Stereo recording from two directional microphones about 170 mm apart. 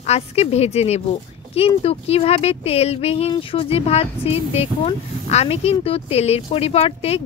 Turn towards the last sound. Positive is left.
turn(degrees=35)  # may be behind; listen again after turning